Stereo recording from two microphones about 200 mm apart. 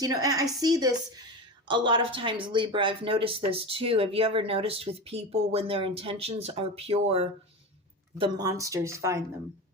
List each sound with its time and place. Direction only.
0.0 s speech: 20° right (ahead or behind)
8.2 s speech: 20° right (ahead or behind)